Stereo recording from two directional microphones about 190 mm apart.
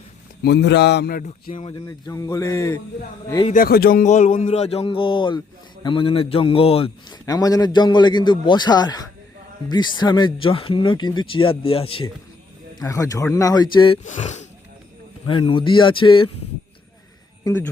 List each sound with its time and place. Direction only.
0.4 s speech: 60° left (ahead or behind)
1.9 s speech: 15° left (ahead or behind)
3.5 s a man's voice: 50° left (ahead or behind); by 12.0 s 30° left (ahead or behind)
12.8 s speech: 15° left (ahead or behind)
14.0 s a man's voice: 40° left (ahead or behind)
15.3 s a man's voice: 25° left (ahead or behind)
17.4 s speech: 10° left (ahead or behind)